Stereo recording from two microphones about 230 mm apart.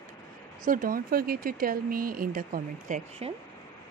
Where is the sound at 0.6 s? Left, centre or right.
Right.